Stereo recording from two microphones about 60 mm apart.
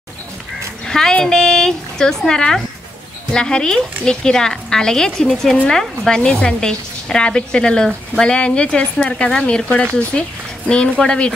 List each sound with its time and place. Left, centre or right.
0.8 s dog: centre
1.2 s a woman's voice: centre